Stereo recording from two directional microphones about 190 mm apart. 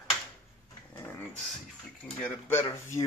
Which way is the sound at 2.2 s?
10° left (ahead or behind).